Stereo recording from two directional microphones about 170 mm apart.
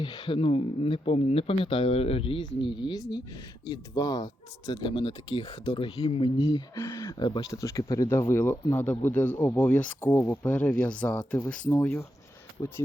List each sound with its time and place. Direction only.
0.0 s speech: 30° left (ahead or behind)
6.7 s speech: 15° left (ahead or behind)